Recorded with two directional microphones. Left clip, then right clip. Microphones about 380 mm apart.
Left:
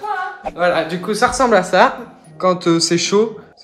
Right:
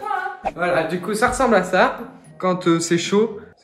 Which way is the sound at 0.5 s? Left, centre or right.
Left.